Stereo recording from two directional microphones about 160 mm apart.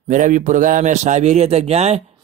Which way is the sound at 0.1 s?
55° right (ahead or behind).